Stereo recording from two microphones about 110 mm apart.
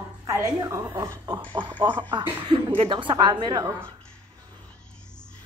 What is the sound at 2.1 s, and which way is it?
A woman's voice, 45° right (ahead or behind).